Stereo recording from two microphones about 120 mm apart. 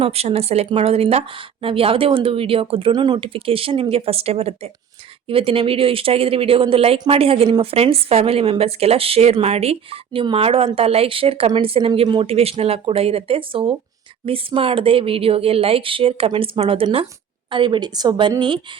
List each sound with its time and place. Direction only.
0.0 s a woman's voice: 55° right (ahead or behind)